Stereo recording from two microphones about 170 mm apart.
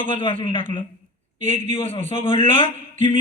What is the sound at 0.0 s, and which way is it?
Speech, 30° left (ahead or behind).